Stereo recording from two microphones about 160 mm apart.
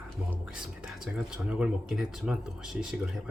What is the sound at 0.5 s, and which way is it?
Speech, 5° right (ahead or behind).